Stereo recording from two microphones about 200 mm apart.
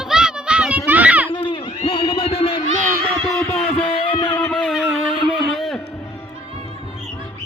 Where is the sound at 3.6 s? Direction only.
25° left (ahead or behind).